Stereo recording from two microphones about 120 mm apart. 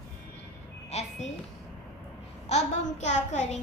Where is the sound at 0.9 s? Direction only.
65° left (ahead or behind).